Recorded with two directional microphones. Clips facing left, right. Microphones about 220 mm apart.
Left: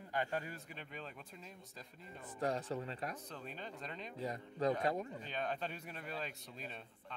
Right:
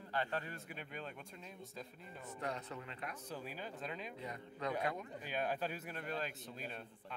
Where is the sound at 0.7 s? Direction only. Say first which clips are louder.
Right 2 dB; centre (ahead or behind).